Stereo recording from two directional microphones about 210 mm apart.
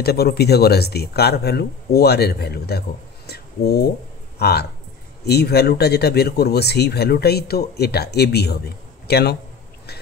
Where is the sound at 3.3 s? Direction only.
50° left (ahead or behind).